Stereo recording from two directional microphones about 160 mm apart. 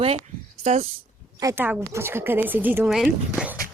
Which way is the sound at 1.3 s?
15° right (ahead or behind).